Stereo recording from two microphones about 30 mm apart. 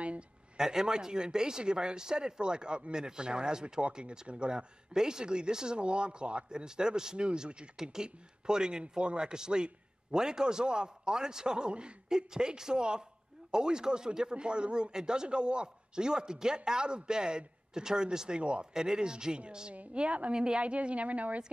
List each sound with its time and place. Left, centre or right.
0.6 s speech: right
5.8 s speech: right
6.5 s speech: right
7.2 s speech: right
7.8 s speech: right
18.4 s speech: right
18.7 s speech: right
19.9 s speech: right
20.3 s speech: right
20.6 s speech: right